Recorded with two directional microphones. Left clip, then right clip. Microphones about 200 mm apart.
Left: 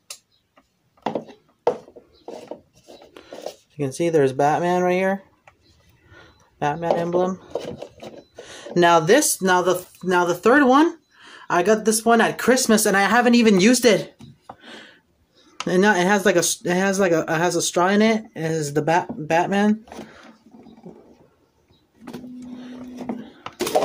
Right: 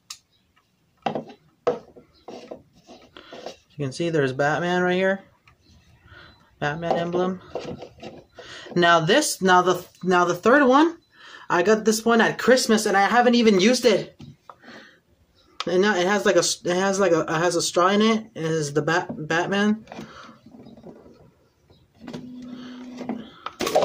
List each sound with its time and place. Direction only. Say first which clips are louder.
3.2 s speech: left 3 dB; 15° left (ahead or behind)
8.4 s a sound: left 3 dB; 15° left (ahead or behind)
9.4 s speech: right 1 dB; 10° left (ahead or behind)
12.5 s speech: left 1 dB; 30° left (ahead or behind)
14.6 s a sound: left 3 dB; 35° left (ahead or behind)
15.6 s speech: left 3 dB; 30° left (ahead or behind)
22.0 s power windows: left 1 dB; 10° left (ahead or behind)